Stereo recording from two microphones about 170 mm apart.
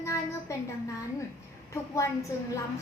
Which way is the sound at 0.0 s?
15° left (ahead or behind).